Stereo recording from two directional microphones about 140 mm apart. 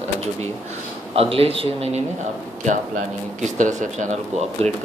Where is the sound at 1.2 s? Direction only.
45° right (ahead or behind).